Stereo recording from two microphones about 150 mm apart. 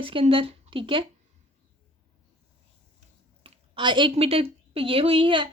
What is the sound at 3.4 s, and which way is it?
A woman's voice, 35° right (ahead or behind).